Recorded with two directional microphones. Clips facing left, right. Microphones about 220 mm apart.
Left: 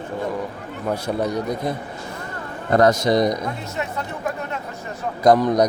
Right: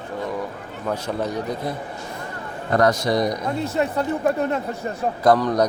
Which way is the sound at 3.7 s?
35° right (ahead or behind).